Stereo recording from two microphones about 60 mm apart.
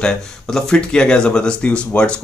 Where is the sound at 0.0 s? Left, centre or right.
Centre.